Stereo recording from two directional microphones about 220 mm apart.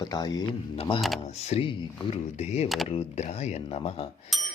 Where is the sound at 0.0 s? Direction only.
20° left (ahead or behind).